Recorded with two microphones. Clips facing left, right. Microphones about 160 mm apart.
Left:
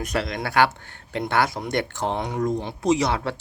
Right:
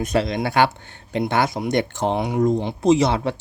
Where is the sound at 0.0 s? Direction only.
25° right (ahead or behind).